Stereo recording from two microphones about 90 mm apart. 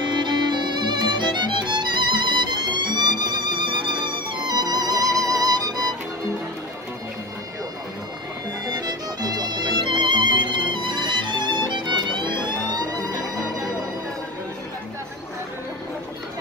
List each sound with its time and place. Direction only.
0.0 s music: 55° right (ahead or behind)
8.7 s music: 50° right (ahead or behind)